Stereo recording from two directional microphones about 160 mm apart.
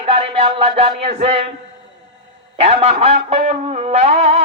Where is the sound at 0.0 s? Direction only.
35° right (ahead or behind).